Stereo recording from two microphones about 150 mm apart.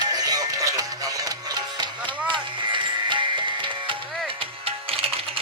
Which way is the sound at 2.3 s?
30° right (ahead or behind).